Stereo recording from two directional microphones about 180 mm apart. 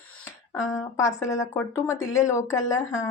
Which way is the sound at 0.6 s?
15° left (ahead or behind).